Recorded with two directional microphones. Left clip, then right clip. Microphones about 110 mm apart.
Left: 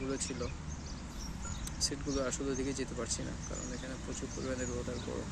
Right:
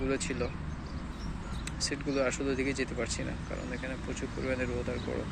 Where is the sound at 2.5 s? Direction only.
85° left.